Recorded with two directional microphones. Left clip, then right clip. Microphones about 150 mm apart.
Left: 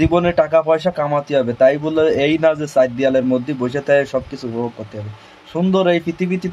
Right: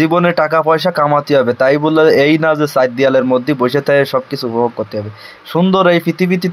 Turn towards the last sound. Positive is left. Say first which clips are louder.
# right 6 dB
turn(degrees=-30)  # may be behind; listen again after turning